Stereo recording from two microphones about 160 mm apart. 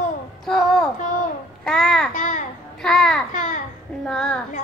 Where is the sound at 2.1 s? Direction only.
50° left (ahead or behind).